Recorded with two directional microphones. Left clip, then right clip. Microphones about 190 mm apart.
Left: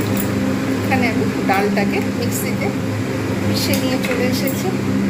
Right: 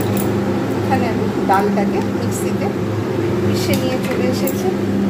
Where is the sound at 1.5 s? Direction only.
Centre (ahead or behind).